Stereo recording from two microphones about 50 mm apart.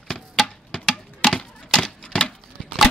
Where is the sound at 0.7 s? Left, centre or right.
Centre.